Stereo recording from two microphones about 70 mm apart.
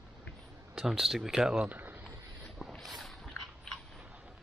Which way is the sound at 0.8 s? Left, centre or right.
Centre.